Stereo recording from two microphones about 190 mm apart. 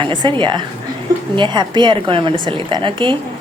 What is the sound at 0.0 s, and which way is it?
A woman's voice, 25° right (ahead or behind).